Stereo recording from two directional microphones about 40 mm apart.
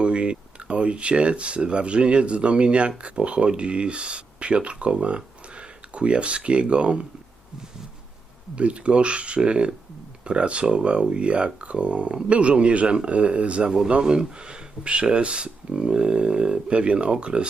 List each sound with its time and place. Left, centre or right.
0.0 s speech: right
8.5 s speech: right